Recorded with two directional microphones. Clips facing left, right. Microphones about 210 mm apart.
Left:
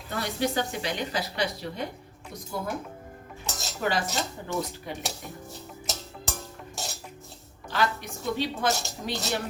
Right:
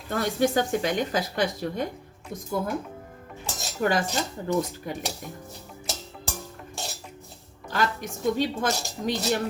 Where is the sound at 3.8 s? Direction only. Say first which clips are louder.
Right 3 dB; 45° right (ahead or behind).